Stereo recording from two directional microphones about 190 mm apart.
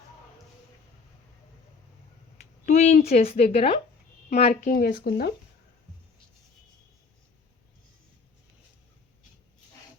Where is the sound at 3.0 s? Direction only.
30° left (ahead or behind); by 5.3 s 55° left (ahead or behind).